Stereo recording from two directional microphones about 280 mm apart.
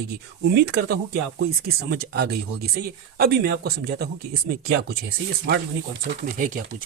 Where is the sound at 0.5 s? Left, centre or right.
Right.